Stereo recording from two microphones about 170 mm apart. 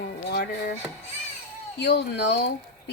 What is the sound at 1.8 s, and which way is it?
Speech, 85° left.